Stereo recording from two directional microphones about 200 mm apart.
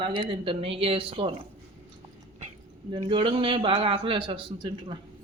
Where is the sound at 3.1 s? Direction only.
25° right (ahead or behind).